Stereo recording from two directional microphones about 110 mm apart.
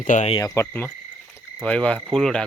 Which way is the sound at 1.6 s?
10° left (ahead or behind).